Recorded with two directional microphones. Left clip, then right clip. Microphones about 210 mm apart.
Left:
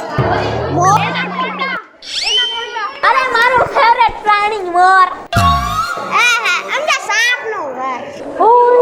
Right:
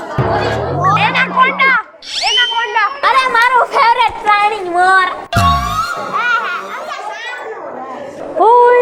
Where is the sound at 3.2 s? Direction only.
25° right (ahead or behind).